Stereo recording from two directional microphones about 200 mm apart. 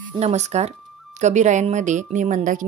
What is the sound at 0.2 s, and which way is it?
Speech, 35° right (ahead or behind).